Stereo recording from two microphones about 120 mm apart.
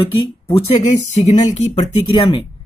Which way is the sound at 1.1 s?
70° left (ahead or behind).